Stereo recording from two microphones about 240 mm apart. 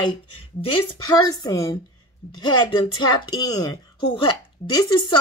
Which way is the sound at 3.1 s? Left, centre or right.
Centre.